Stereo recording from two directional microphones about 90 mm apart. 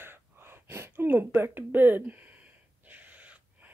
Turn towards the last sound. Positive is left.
turn(degrees=-15)  # may be behind; listen again after turning